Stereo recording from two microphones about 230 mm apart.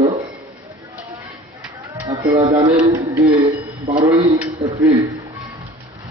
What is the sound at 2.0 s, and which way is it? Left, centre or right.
Music, centre.